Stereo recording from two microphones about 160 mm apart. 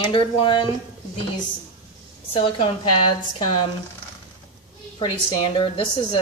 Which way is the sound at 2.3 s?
35° left (ahead or behind).